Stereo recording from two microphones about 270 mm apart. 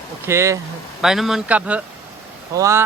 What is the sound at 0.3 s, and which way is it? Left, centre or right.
Speech, centre.